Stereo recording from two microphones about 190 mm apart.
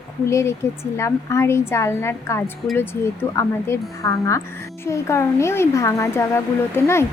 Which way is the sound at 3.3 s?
15° left (ahead or behind).